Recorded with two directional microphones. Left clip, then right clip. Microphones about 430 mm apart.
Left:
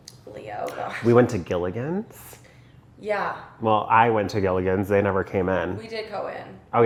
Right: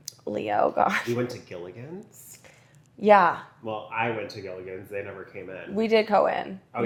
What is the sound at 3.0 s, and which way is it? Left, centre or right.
Speech, left.